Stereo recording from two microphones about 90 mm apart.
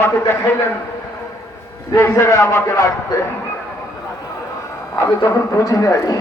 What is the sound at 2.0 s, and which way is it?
Speech, 30° left (ahead or behind).